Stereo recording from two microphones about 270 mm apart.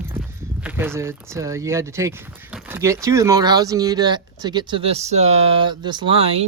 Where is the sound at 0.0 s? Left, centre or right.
Centre.